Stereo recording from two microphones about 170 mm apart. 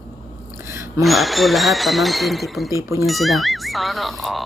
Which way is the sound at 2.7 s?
15° right (ahead or behind).